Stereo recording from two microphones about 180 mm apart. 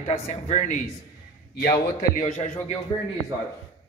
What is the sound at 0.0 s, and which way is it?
A man's voice, 35° left (ahead or behind).